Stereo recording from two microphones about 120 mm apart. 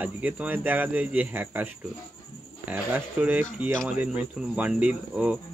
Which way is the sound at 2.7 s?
15° right (ahead or behind).